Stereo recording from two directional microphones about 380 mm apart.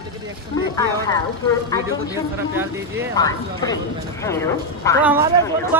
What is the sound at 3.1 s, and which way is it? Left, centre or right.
Speech, centre.